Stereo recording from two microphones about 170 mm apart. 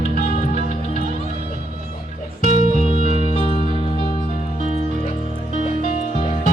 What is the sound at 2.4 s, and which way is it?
Music, 50° right (ahead or behind).